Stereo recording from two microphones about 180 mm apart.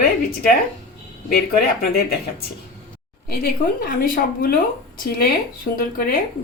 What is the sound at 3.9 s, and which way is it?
A woman's voice, 55° left (ahead or behind).